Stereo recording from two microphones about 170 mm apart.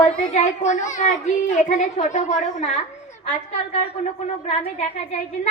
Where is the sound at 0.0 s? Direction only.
45° left (ahead or behind).